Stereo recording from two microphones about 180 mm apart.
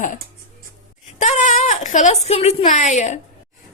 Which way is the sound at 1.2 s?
45° left (ahead or behind).